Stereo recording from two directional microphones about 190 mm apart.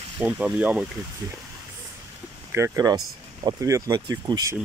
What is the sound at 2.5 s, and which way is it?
Speech, 15° right (ahead or behind).